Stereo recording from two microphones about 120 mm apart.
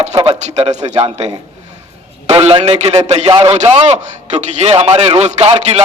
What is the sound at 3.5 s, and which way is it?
A man's voice, 75° right (ahead or behind).